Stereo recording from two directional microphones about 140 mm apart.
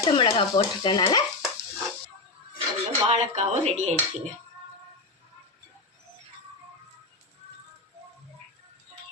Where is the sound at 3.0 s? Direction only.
55° right (ahead or behind).